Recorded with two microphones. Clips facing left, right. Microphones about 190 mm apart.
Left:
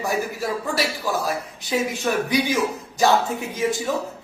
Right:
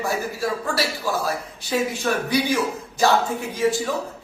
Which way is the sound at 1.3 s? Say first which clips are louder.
Even; 15° left (ahead or behind).